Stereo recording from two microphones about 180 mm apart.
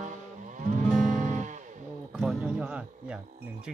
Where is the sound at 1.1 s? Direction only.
45° right (ahead or behind).